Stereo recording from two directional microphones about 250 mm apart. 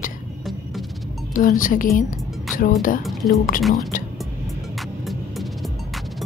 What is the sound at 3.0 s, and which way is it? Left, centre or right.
Speech, centre.